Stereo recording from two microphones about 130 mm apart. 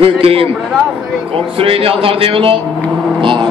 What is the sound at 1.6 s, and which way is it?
Speech, 45° right (ahead or behind).